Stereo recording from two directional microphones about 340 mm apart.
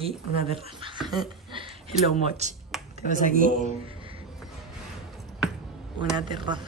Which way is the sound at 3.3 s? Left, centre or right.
Right.